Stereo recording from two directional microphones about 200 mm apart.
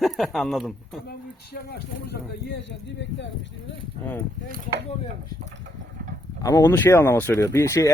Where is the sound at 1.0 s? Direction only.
50° left (ahead or behind).